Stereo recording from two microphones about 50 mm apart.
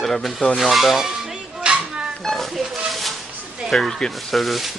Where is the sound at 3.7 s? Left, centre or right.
Centre.